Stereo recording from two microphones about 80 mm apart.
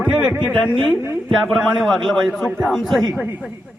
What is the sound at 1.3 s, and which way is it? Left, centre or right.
A man's voice, centre.